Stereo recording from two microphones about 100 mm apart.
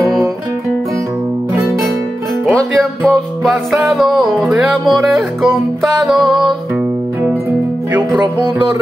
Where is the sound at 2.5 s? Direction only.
10° left (ahead or behind).